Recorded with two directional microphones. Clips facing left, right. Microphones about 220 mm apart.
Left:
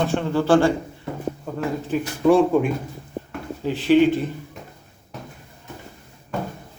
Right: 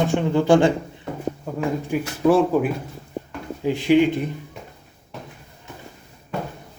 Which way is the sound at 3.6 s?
15° right (ahead or behind).